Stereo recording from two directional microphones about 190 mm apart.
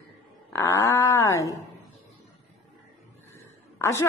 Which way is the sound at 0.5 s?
15° left (ahead or behind).